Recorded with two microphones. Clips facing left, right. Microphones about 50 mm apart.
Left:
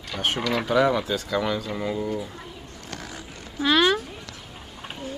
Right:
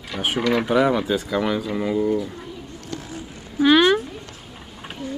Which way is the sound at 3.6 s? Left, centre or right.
Centre.